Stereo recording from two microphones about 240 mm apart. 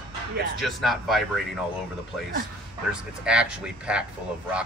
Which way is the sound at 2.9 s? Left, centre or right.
Centre.